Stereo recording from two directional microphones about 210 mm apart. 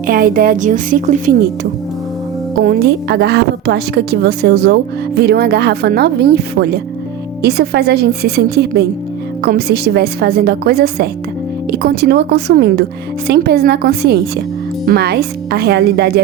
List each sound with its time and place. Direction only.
0.1 s a woman's voice: 45° right (ahead or behind)
2.6 s a woman's voice: 50° right (ahead or behind)